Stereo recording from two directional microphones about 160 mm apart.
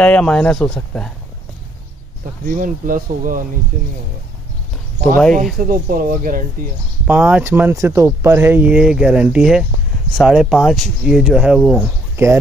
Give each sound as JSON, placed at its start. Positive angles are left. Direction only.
{"t": 0.0, "sound": "speech", "side_deg": 5}
{"t": 2.4, "sound": "speech", "side_deg": -60}
{"t": 5.4, "sound": "speech", "side_deg": -60}
{"t": 7.1, "sound": "speech", "side_deg": -10}